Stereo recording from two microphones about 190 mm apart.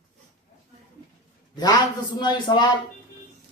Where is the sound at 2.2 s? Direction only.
25° left (ahead or behind).